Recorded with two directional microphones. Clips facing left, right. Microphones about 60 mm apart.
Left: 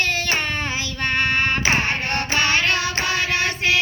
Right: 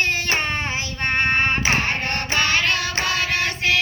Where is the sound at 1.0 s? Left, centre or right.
Right.